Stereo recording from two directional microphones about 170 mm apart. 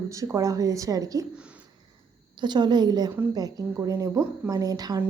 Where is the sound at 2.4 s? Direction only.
25° right (ahead or behind).